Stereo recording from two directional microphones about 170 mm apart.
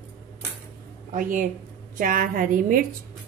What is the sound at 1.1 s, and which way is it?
Speech, 50° right (ahead or behind).